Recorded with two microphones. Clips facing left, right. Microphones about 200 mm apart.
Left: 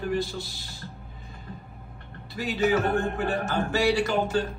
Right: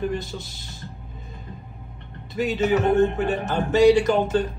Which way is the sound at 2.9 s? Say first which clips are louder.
Right 6 dB; 20° right (ahead or behind).